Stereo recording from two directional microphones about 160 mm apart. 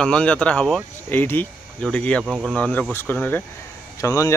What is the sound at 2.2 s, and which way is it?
Speech, 5° right (ahead or behind).